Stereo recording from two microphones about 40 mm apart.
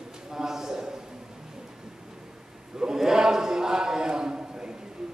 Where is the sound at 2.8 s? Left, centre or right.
Centre.